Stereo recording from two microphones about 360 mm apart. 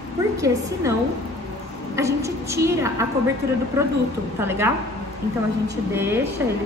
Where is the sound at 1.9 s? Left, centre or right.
Centre.